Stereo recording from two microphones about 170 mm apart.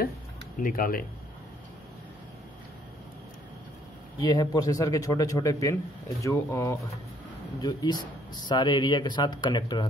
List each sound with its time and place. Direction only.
0.6 s speech: 55° left (ahead or behind)
4.2 s a man's voice: 25° left (ahead or behind)